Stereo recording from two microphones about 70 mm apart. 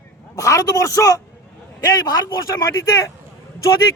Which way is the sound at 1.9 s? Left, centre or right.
Left.